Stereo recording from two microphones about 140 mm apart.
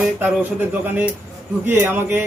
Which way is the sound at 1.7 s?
15° right (ahead or behind).